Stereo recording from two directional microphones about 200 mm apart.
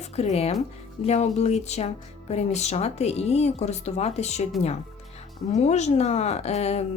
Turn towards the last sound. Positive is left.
turn(degrees=30)  # may be behind; listen again after turning